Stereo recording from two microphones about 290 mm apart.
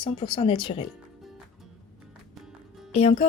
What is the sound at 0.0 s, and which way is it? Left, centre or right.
Speech, centre.